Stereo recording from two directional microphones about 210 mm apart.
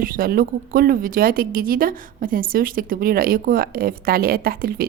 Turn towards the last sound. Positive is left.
turn(degrees=-45)  # may be behind; listen again after turning